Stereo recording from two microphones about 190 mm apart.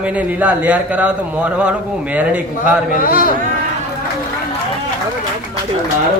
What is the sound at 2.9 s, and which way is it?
Speech, 45° left (ahead or behind).